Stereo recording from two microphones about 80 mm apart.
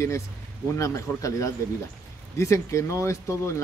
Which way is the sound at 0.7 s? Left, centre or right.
Left.